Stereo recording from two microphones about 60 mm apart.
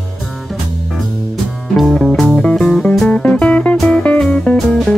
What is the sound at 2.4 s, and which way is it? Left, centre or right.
Music, centre.